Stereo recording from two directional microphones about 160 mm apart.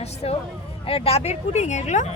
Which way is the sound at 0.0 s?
40° left (ahead or behind).